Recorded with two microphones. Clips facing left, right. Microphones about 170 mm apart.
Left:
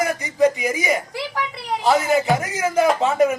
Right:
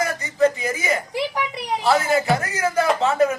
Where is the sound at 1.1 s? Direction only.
20° right (ahead or behind).